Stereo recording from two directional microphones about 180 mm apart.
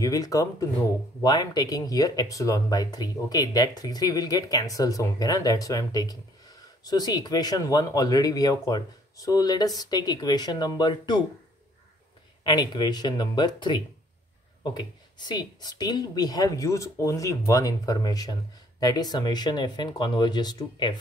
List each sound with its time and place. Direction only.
0.0 s speech: 20° left (ahead or behind)
12.4 s speech: 25° left (ahead or behind)
15.1 s speech: 25° left (ahead or behind)